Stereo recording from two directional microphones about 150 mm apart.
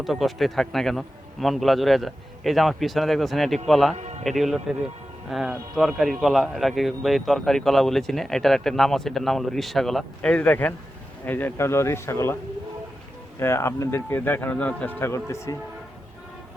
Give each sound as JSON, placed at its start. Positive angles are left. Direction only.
{"t": 0.0, "sound": "speech", "side_deg": 0}
{"t": 3.9, "sound": "a man's voice", "side_deg": -50}
{"t": 4.2, "sound": "speech", "side_deg": 0}
{"t": 13.4, "sound": "speech", "side_deg": 20}